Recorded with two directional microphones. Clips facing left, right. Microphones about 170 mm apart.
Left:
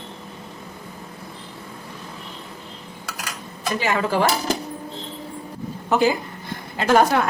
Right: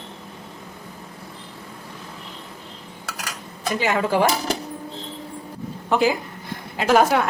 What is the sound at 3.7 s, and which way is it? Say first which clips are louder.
Speech: right 1 dB; 20° right (ahead or behind).